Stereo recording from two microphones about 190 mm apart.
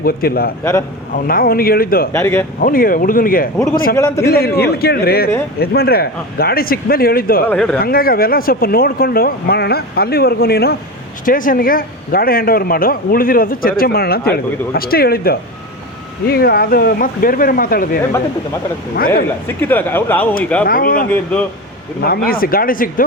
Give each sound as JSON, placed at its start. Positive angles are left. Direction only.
{"t": 0.0, "sound": "a man's voice", "side_deg": 50}
{"t": 0.6, "sound": "speech", "side_deg": 15}
{"t": 1.1, "sound": "a man's voice", "side_deg": 50}
{"t": 2.1, "sound": "speech", "side_deg": 10}
{"t": 2.6, "sound": "a man's voice", "side_deg": 45}
{"t": 7.4, "sound": "speech", "side_deg": 5}
{"t": 7.8, "sound": "a man's voice", "side_deg": 50}
{"t": 18.9, "sound": "a man's voice", "side_deg": 50}
{"t": 19.5, "sound": "speech", "side_deg": 10}
{"t": 20.7, "sound": "a man's voice", "side_deg": 50}